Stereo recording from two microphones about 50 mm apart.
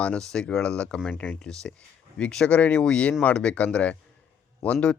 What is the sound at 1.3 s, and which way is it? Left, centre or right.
Speech, centre.